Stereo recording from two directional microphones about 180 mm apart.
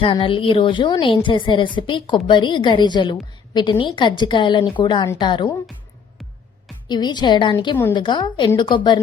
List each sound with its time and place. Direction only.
0.0 s a woman's voice: 30° left (ahead or behind)
6.8 s a woman's voice: 25° left (ahead or behind)